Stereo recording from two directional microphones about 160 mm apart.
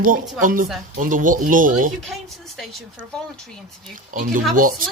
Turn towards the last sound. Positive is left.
turn(degrees=-60)  # may be behind; listen again after turning